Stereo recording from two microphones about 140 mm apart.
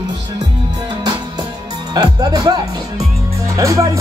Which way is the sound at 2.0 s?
25° right (ahead or behind).